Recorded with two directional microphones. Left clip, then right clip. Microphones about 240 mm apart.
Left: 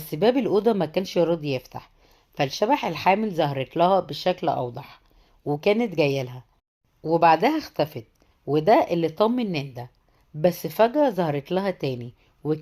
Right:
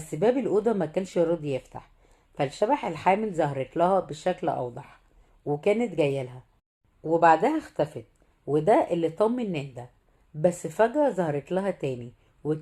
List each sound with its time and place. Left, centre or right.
0.1 s a woman's voice: left